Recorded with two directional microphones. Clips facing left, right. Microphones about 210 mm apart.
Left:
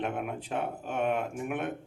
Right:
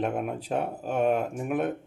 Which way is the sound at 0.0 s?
35° right (ahead or behind).